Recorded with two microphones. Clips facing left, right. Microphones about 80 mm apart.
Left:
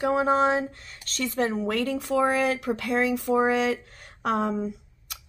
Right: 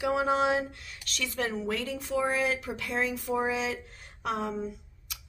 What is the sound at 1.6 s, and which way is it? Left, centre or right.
Speech, left.